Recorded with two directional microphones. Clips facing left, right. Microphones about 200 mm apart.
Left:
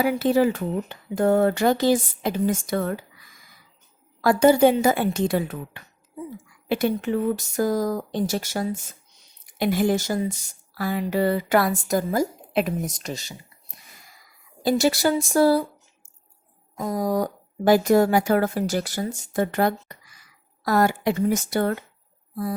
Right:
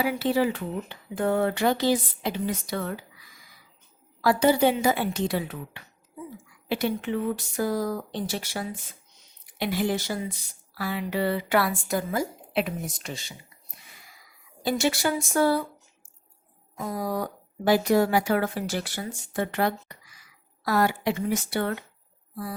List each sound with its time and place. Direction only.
0.0 s a woman's voice: 45° left (ahead or behind)
4.2 s a woman's voice: 50° left (ahead or behind)
14.6 s speech: 40° left (ahead or behind)
16.7 s a woman's voice: 40° left (ahead or behind)